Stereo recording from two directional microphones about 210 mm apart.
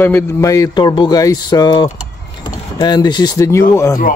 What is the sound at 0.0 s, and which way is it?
Speech, 10° left (ahead or behind).